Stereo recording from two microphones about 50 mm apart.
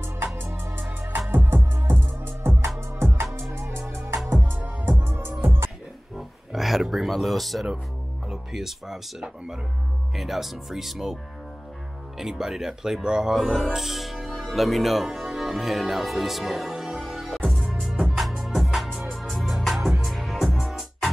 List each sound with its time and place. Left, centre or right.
0.7 s music: right
4.3 s music: right
6.1 s a sound: centre
8.3 s speech: centre
10.1 s speech: centre
12.2 s speech: centre
13.4 s speech: centre
13.7 s music: centre
17.8 s music: centre
18.1 s music: centre